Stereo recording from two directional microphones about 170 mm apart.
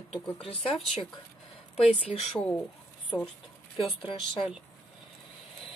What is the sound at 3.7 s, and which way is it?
Speech, 30° left (ahead or behind).